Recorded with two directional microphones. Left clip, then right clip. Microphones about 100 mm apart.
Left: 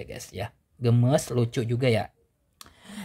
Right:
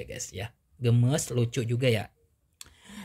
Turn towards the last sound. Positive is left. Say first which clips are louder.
# left 3 dB
turn(degrees=15)  # may be behind; listen again after turning